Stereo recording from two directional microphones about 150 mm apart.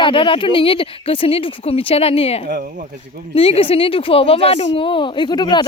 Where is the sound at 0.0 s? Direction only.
35° left (ahead or behind).